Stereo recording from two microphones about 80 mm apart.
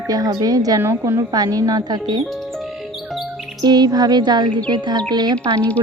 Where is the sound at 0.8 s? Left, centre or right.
Right.